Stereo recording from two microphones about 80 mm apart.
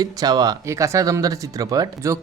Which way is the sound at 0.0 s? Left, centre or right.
Right.